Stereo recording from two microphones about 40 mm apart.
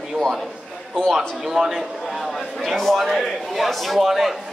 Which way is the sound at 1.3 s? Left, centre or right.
Centre.